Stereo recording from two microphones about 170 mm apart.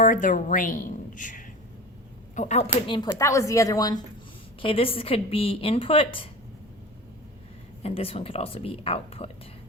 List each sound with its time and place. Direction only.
0.0 s a woman's voice: 50° left (ahead or behind)
2.8 s a woman's voice: 30° left (ahead or behind)
3.1 s a woman's voice: 15° left (ahead or behind)
4.6 s a woman's voice: 35° left (ahead or behind)
7.8 s a woman's voice: 35° left (ahead or behind)